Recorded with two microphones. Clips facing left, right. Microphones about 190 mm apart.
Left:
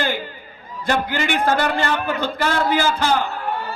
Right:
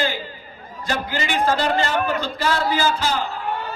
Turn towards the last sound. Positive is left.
turn(degrees=10)  # may be behind; listen again after turning